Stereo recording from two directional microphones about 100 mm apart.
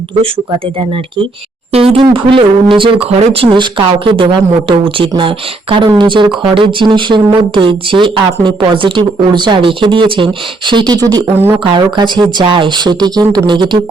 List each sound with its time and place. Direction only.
1.7 s speech: 75° right (ahead or behind)
2.1 s speech: 60° right (ahead or behind); by 3.5 s 85° right
3.5 s a woman's voice: 50° right (ahead or behind)